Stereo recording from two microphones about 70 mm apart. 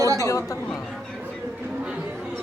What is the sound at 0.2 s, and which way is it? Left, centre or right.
Speech, left.